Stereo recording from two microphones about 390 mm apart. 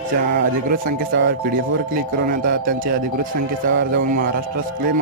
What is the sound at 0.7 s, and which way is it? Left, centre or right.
Speech, right.